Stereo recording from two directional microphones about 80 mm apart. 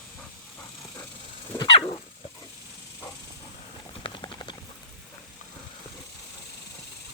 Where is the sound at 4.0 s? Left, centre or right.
Left.